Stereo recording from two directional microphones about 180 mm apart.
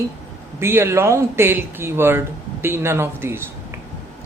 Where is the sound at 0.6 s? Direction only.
15° right (ahead or behind).